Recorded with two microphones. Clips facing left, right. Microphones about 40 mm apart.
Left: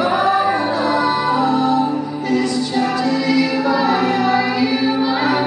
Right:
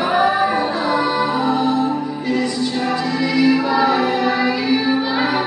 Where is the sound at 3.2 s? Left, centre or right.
Centre.